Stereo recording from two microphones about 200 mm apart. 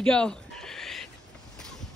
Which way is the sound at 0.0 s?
5° left (ahead or behind).